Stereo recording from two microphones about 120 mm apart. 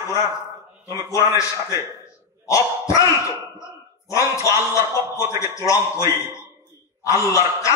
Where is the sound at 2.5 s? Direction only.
25° left (ahead or behind).